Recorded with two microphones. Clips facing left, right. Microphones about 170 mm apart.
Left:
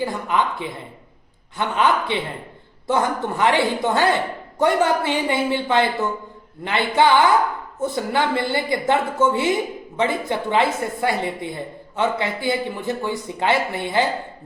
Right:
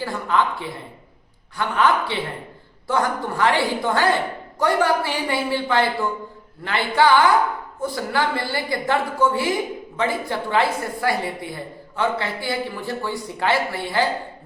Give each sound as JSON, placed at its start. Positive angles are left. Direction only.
{"t": 0.0, "sound": "speech", "side_deg": 15}